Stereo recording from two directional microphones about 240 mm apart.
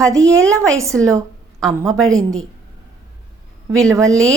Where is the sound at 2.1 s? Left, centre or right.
Centre.